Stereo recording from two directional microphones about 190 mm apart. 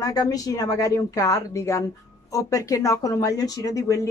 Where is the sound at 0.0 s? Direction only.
20° left (ahead or behind).